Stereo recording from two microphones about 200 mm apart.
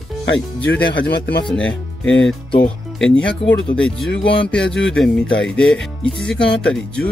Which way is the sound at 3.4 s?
30° left (ahead or behind).